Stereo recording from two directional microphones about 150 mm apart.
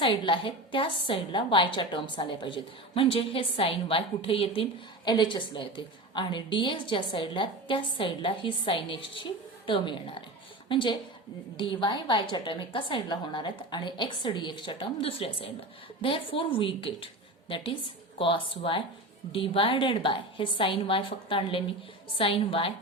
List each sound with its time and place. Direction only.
0.0 s a woman's voice: 35° left (ahead or behind)
18.2 s a woman's voice: 35° left (ahead or behind)